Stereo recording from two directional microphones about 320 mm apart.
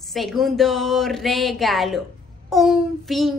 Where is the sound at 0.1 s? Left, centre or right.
Centre.